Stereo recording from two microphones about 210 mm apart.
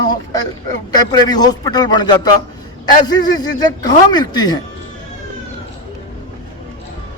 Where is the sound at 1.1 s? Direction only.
20° left (ahead or behind).